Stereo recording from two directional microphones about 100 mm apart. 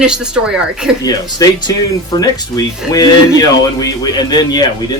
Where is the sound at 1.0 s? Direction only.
40° left (ahead or behind).